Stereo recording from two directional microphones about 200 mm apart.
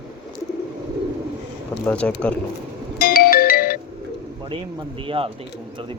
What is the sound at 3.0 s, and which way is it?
Music, 50° left (ahead or behind).